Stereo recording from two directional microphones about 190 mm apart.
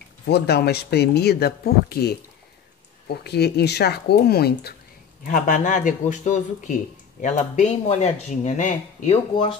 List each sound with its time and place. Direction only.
0.3 s speech: 60° left (ahead or behind)
5.2 s a man's voice: 45° left (ahead or behind)